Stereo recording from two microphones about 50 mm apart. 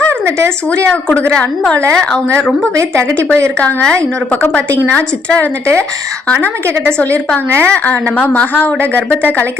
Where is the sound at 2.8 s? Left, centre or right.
Right.